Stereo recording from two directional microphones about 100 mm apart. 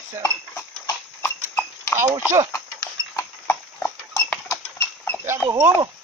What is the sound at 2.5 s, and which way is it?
Horse, 30° left (ahead or behind).